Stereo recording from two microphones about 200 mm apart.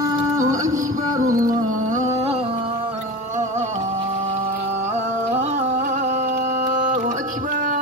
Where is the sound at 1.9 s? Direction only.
30° right (ahead or behind).